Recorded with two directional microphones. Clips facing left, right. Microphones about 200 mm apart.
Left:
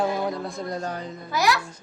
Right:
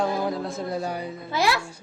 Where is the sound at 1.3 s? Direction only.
25° right (ahead or behind).